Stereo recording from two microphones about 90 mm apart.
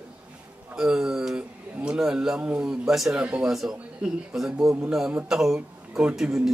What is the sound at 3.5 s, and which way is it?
A man's voice, 5° right (ahead or behind).